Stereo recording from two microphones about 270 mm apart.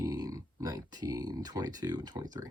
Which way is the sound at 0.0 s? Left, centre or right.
Centre.